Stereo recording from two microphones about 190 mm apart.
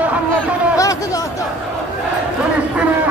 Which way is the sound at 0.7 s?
15° left (ahead or behind).